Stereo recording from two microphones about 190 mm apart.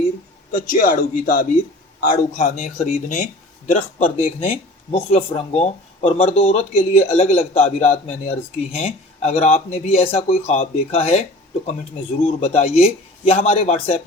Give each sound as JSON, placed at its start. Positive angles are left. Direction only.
{"t": 0.5, "sound": "speech", "side_deg": 50}
{"t": 12.2, "sound": "speech", "side_deg": 35}